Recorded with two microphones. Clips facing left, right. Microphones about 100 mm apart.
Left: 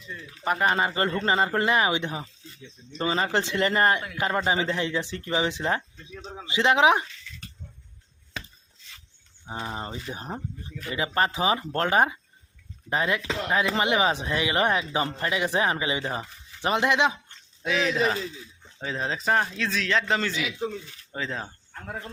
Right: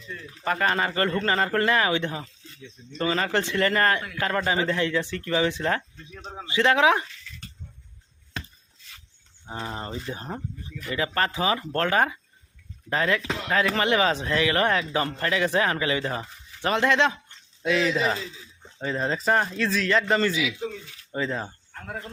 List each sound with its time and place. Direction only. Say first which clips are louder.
0.4 s a man's voice: left 1 dB; 20° left (ahead or behind)
9.5 s a man's voice: even; 15° left (ahead or behind)
17.6 s a man's voice: right 1 dB; centre (ahead or behind)